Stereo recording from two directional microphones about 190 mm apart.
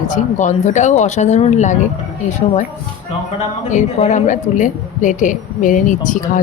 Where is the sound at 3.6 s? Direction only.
40° left (ahead or behind).